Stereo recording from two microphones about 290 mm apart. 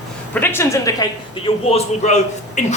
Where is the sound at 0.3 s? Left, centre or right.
Centre.